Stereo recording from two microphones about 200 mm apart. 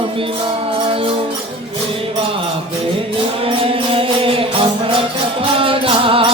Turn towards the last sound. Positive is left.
turn(degrees=-25)  # may be behind; listen again after turning